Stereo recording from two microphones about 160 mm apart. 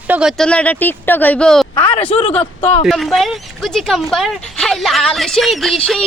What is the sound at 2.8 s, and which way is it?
Speech, centre (ahead or behind).